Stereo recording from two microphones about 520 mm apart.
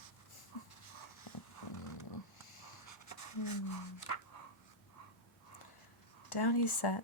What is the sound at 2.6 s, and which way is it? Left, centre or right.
Writing, left.